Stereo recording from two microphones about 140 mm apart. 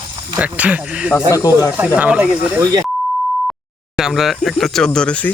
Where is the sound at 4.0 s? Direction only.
5° right (ahead or behind).